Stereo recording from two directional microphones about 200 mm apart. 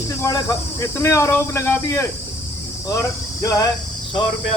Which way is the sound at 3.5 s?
20° left (ahead or behind).